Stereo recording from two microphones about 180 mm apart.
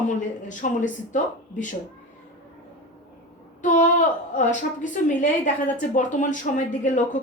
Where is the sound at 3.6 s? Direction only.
45° left (ahead or behind).